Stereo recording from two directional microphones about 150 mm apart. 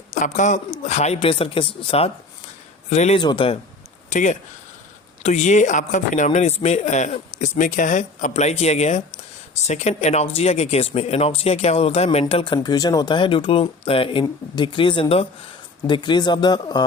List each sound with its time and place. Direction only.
0.1 s speech: 55° left (ahead or behind); by 2.0 s 35° left (ahead or behind)
2.9 s speech: 50° left (ahead or behind)
3.2 s speech: 30° left (ahead or behind)
4.1 s speech: 55° left (ahead or behind)
12.6 s speech: 25° left (ahead or behind)